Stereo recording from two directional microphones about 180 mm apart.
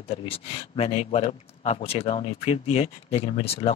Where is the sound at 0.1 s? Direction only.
30° left (ahead or behind).